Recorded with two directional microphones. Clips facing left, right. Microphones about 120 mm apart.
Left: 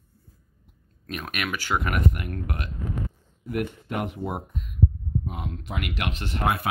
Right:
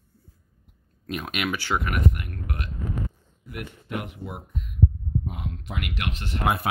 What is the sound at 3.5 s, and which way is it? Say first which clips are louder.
Speech: left 5 dB; 50° left (ahead or behind).